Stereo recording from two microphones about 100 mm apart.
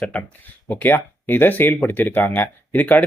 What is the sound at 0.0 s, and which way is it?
Speech, 15° left (ahead or behind).